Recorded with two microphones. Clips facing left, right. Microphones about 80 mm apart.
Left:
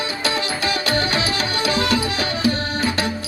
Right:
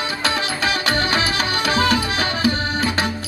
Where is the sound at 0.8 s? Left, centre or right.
Right.